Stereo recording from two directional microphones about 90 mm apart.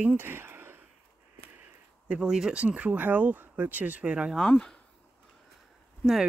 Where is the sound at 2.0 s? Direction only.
10° right (ahead or behind).